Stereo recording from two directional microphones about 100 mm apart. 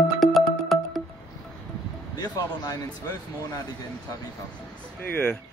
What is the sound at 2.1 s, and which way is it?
Speech, 40° left (ahead or behind).